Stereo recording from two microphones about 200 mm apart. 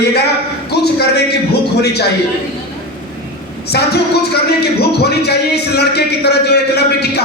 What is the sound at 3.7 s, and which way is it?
Speech, 55° left (ahead or behind).